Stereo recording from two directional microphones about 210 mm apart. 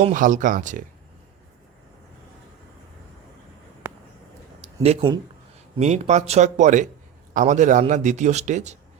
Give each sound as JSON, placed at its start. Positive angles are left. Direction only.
{"t": 0.0, "sound": "a man's voice", "side_deg": -40}
{"t": 3.8, "sound": "a sound", "side_deg": -10}
{"t": 4.8, "sound": "a man's voice", "side_deg": -30}